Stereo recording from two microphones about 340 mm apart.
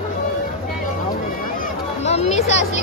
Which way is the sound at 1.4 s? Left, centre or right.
Left.